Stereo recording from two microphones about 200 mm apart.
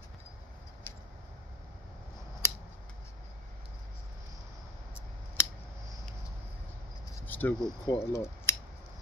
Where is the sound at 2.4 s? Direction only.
10° left (ahead or behind).